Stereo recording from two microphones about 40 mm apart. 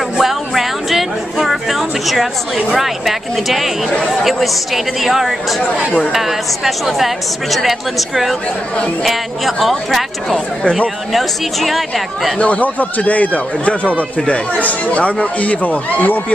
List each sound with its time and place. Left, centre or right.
0.2 s music: centre
2.7 s a woman's voice: centre
11.1 s a woman's voice: centre
12.4 s speech: left
14.2 s speech: left